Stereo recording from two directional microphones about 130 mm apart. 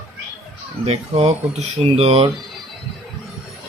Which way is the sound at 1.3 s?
55° right (ahead or behind).